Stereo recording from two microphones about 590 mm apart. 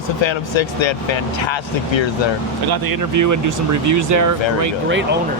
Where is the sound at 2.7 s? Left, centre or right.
Right.